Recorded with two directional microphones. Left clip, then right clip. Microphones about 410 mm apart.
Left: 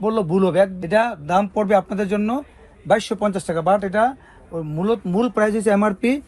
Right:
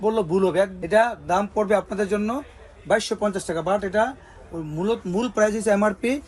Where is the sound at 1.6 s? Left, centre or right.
Left.